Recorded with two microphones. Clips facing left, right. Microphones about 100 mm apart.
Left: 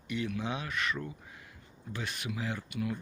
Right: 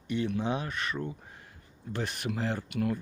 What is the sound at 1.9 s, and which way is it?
Speech, 55° right (ahead or behind).